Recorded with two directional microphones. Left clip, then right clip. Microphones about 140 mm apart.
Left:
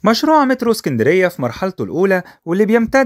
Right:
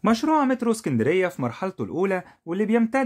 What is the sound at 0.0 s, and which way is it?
Speech, 45° left (ahead or behind).